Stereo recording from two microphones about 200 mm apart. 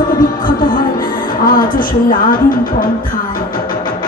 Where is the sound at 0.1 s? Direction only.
45° left (ahead or behind).